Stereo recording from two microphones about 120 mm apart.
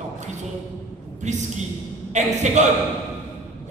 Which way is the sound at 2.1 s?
80° right.